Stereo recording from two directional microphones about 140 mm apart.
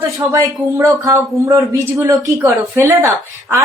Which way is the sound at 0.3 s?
20° right (ahead or behind).